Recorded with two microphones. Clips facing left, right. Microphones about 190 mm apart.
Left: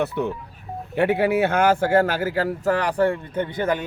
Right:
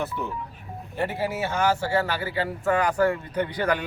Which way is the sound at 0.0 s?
65° left (ahead or behind).